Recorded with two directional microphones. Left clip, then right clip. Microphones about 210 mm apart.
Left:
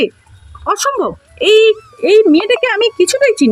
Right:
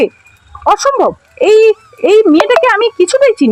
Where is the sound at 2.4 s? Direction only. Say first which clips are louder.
Right 5 dB; 30° right (ahead or behind).